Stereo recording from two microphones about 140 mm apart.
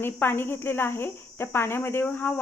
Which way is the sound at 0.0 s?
15° left (ahead or behind).